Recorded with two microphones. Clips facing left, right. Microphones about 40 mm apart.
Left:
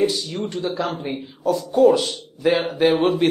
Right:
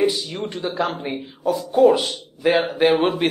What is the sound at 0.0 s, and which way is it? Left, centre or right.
A man's voice, centre.